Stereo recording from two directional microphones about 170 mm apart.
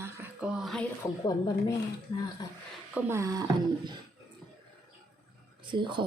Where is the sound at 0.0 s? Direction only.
10° right (ahead or behind).